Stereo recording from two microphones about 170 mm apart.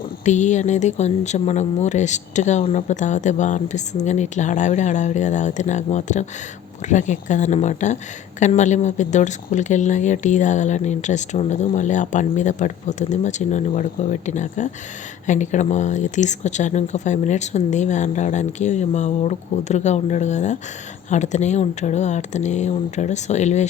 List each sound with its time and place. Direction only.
0.3 s speech: 45° left (ahead or behind)